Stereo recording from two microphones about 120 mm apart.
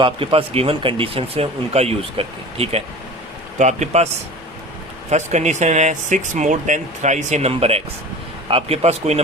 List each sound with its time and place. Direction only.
0.0 s speech: 50° right (ahead or behind)
3.6 s speech: 75° right (ahead or behind)
5.1 s speech: 75° right (ahead or behind)